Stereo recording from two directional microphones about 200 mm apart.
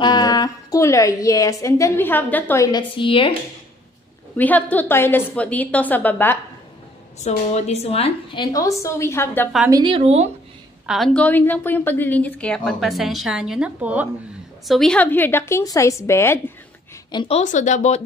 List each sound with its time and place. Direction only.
0.0 s a woman's voice: 20° left (ahead or behind)
4.4 s a woman's voice: 10° left (ahead or behind)
7.2 s a woman's voice: 35° left (ahead or behind); by 9.5 s 10° left (ahead or behind)
9.7 s a woman's voice: 20° right (ahead or behind)
10.9 s a woman's voice: 5° left (ahead or behind)
14.7 s a woman's voice: 5° left (ahead or behind)
17.1 s a woman's voice: 25° left (ahead or behind)
17.4 s speech: 40° left (ahead or behind)